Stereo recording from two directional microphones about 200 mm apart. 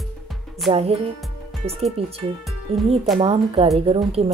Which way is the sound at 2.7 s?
30° right (ahead or behind).